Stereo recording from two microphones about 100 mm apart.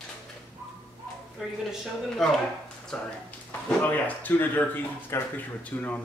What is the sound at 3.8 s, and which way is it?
Speech, 15° left (ahead or behind).